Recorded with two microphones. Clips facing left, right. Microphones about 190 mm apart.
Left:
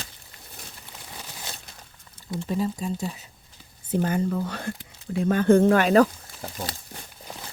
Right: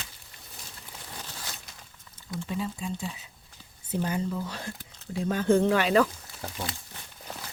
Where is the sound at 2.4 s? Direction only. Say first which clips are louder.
Left 6 dB; 40° left (ahead or behind).